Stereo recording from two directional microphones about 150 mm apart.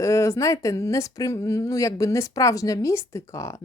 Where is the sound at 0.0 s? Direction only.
20° left (ahead or behind).